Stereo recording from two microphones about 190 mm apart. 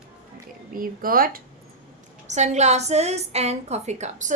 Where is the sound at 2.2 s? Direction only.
40° right (ahead or behind).